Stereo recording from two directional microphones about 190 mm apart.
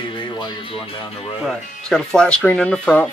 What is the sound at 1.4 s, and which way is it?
Speech, 5° left (ahead or behind).